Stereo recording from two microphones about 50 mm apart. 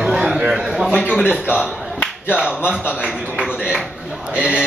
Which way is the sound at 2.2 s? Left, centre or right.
Centre.